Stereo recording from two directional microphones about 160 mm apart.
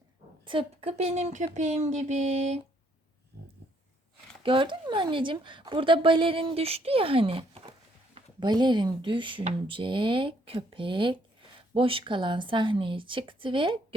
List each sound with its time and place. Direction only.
0.4 s speech: 35° right (ahead or behind)
4.4 s speech: 30° right (ahead or behind)